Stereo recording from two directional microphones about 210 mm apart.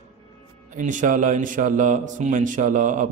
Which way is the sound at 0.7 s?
35° right (ahead or behind).